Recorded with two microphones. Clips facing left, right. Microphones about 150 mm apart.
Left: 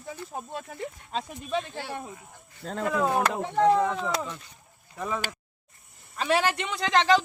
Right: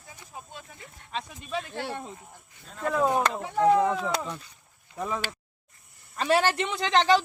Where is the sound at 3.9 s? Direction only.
5° right (ahead or behind).